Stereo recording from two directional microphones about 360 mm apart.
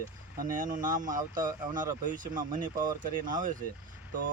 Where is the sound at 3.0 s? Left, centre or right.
Right.